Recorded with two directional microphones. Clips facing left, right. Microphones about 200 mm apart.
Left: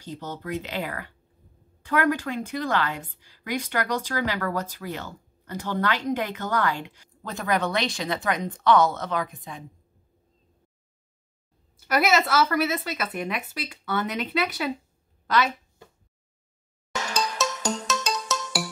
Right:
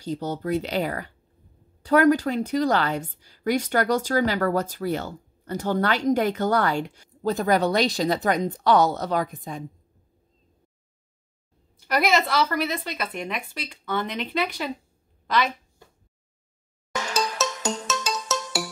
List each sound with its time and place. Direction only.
0.0 s a woman's voice: 40° right (ahead or behind)
11.9 s speech: 5° left (ahead or behind)
17.4 s music: centre (ahead or behind)